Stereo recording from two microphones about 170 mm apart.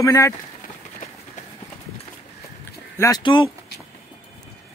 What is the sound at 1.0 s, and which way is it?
Run, 50° left (ahead or behind).